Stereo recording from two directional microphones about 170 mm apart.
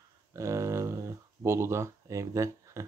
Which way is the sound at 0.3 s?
20° right (ahead or behind).